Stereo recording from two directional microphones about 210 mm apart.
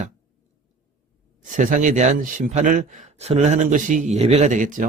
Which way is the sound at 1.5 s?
40° right (ahead or behind).